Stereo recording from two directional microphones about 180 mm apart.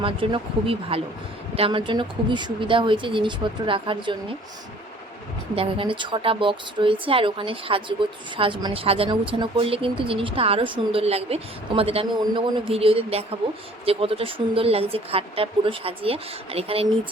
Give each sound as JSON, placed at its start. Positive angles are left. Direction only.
{"t": 0.0, "sound": "a woman's voice", "side_deg": -30}
{"t": 5.5, "sound": "a woman's voice", "side_deg": -30}